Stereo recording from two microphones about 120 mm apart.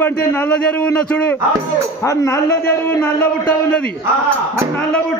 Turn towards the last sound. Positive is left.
turn(degrees=15)  # may be behind; listen again after turning